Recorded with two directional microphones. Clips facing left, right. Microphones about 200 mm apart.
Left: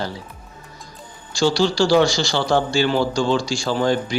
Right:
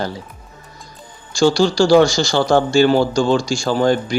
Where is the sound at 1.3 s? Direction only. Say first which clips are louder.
Right 4 dB; 45° right (ahead or behind).